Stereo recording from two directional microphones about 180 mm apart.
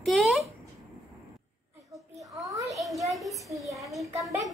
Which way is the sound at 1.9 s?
20° right (ahead or behind).